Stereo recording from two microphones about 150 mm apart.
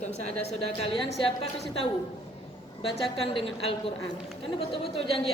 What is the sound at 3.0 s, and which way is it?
Speech, 35° left (ahead or behind).